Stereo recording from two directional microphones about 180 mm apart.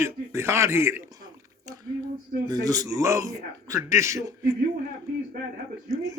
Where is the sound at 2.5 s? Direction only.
20° right (ahead or behind).